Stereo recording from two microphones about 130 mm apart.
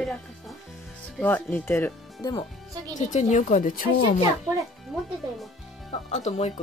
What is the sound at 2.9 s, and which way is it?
Speech, 70° left (ahead or behind).